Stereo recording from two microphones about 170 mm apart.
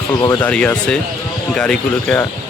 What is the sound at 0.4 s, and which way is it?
Speech, 5° left (ahead or behind).